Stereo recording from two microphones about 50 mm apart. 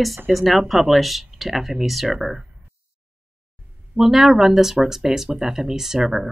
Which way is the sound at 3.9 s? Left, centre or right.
Centre.